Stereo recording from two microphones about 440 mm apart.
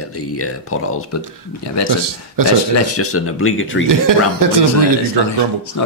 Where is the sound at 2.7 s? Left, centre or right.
Left.